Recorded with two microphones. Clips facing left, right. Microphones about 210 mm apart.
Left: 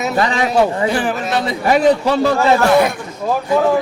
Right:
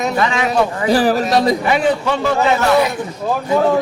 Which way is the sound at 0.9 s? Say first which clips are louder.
Right 4 dB; 35° right (ahead or behind).